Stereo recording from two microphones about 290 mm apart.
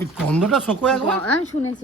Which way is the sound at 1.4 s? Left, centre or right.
Left.